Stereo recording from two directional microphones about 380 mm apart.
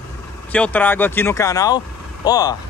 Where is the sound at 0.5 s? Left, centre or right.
Centre.